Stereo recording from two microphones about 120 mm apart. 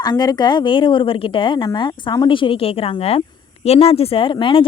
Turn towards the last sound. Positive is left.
turn(degrees=45)  # may be behind; listen again after turning